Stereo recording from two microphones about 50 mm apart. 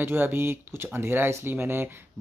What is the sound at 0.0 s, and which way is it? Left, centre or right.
Speech, right.